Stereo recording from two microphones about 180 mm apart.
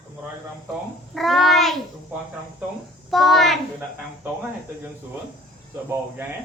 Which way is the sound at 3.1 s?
Centre (ahead or behind).